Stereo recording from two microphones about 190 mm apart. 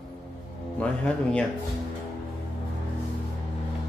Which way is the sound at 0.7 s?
5° left (ahead or behind).